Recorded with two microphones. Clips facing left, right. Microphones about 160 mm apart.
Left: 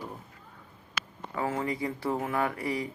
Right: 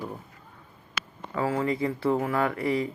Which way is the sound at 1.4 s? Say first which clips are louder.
Right 4 dB; 20° left (ahead or behind).